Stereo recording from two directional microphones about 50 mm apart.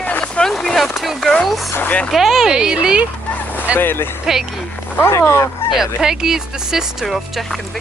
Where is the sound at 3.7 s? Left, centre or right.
Left.